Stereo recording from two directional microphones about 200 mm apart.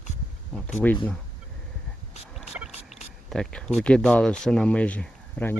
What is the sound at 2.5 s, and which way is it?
Rowboat, 10° right (ahead or behind).